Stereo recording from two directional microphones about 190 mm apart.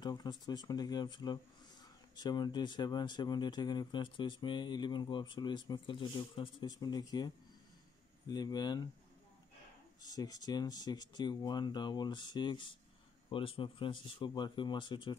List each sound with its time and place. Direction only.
0.0 s speech: 20° left (ahead or behind)
10.0 s speech: 20° left (ahead or behind)